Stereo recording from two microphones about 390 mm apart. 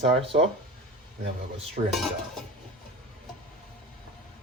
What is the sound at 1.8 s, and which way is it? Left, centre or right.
Dishes, centre.